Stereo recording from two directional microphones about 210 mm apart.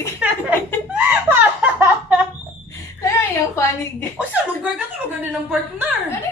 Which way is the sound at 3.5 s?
10° left (ahead or behind).